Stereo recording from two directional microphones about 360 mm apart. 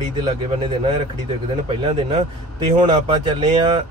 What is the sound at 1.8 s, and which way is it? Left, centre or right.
Speech, centre.